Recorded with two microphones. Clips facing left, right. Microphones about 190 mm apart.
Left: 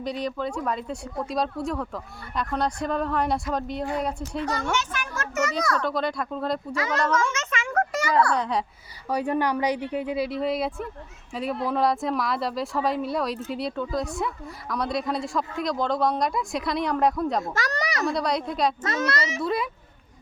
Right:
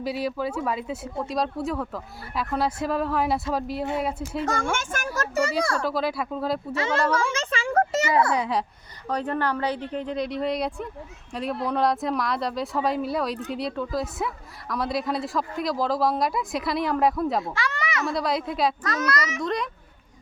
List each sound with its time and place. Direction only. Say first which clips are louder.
0.0 s a woman's voice: right 1 dB; 5° right (ahead or behind)
4.4 s speech: even; 45° right (ahead or behind)
5.1 s a child's voice: right 2 dB; 35° right (ahead or behind)
5.8 s a woman's voice: right 1 dB; 5° right (ahead or behind)
6.7 s speech: right 3 dB; 25° right (ahead or behind)
7.1 s a sound: even; 30° right (ahead or behind)
8.4 s a woman's voice: right 1 dB; centre (ahead or behind)
9.0 s a woman's voice: left 2 dB; 10° left (ahead or behind)
17.4 s a child's voice: left 1 dB; 45° left (ahead or behind)
18.0 s a woman's voice: even; centre (ahead or behind)
18.8 s a child's voice: even; 25° left (ahead or behind)
19.4 s a woman's voice: left 1 dB; 5° left (ahead or behind)